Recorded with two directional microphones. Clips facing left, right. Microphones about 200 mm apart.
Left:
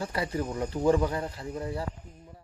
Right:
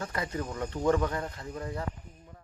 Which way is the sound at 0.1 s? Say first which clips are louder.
Left 3 dB; 25° left (ahead or behind).